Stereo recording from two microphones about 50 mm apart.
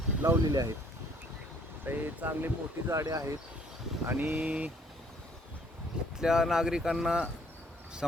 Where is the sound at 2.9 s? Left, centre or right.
Right.